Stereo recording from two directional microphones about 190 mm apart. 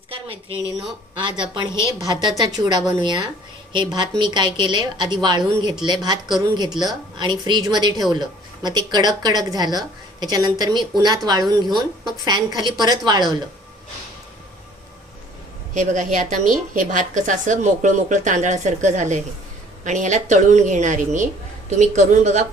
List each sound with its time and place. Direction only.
0.1 s a sound: 30° right (ahead or behind)
1.2 s a woman's voice: 25° right (ahead or behind)
15.7 s a woman's voice: 40° right (ahead or behind)